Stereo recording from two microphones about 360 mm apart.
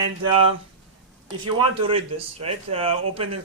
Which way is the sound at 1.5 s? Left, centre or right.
Centre.